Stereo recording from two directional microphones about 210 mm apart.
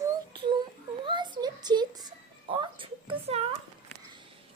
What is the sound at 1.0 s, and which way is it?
Music, 20° right (ahead or behind).